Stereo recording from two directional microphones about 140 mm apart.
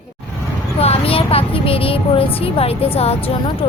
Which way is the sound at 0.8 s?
45° left (ahead or behind).